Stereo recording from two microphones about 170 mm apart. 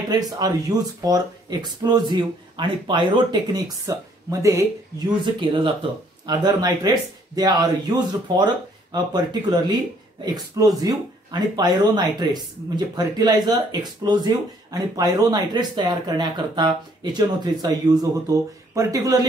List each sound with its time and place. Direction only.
0.3 s speech: 20° right (ahead or behind)